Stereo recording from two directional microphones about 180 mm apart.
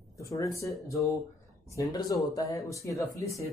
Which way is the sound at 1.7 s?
20° left (ahead or behind).